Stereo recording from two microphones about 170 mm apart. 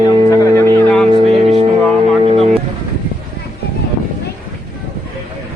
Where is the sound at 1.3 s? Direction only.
40° right (ahead or behind).